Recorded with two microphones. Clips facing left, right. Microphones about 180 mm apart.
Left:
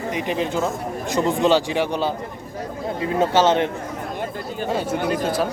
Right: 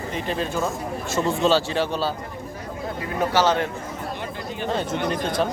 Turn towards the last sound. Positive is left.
turn(degrees=5)  # may be behind; listen again after turning